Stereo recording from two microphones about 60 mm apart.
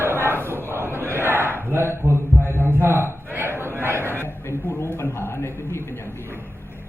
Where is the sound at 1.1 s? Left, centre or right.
Right.